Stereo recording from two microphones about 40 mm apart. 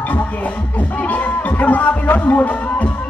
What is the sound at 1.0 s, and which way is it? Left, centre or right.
Music, left.